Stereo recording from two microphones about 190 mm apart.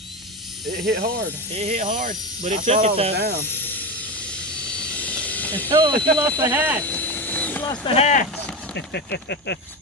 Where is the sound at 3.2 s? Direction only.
55° right (ahead or behind).